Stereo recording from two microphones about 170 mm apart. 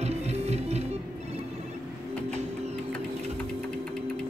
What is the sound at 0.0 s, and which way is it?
Music, 40° right (ahead or behind).